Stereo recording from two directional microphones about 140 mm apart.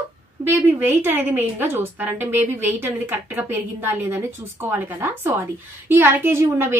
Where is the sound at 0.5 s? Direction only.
15° right (ahead or behind).